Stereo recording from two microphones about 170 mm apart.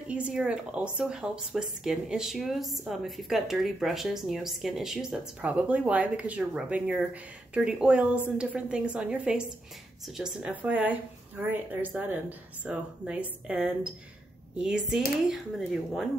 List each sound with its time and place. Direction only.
0.1 s speech: 5° right (ahead or behind)